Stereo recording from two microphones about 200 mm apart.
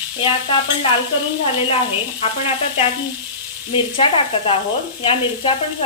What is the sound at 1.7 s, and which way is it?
Speech, 30° left (ahead or behind).